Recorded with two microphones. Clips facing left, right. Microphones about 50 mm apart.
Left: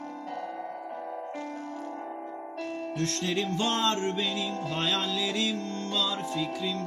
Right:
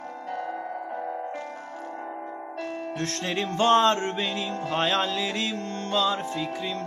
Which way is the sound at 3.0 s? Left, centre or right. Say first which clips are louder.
Even; right.